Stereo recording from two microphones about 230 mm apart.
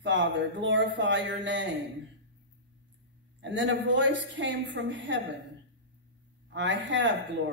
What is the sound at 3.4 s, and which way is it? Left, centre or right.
Speech, right.